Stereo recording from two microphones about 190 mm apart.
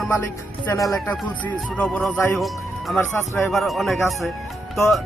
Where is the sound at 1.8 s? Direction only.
5° left (ahead or behind).